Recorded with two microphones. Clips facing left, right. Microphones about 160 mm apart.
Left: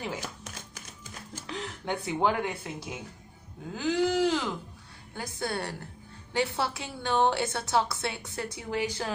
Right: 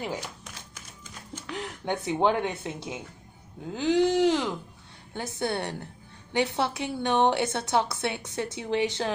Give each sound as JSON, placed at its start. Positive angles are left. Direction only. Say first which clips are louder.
{"t": 1.6, "sound": "a woman's voice", "louder": "right 3 dB", "side_deg": -20}